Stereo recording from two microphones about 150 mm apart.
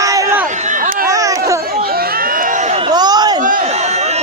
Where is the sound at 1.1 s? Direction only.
20° right (ahead or behind).